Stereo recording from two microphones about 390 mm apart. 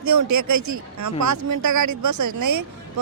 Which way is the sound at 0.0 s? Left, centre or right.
Right.